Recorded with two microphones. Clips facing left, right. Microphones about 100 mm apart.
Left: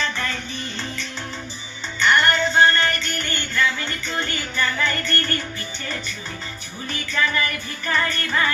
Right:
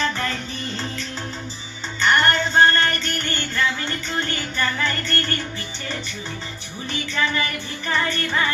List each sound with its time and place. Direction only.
2.0 s music: 40° right (ahead or behind)
7.1 s music: 25° right (ahead or behind)